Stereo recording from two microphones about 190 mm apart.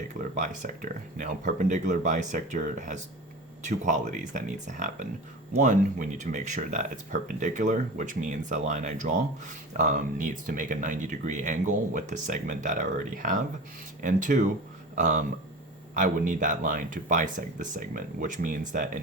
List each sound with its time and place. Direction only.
0.3 s speech: 45° right (ahead or behind)